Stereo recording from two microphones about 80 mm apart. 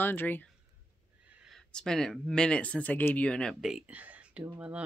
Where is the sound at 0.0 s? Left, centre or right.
Left.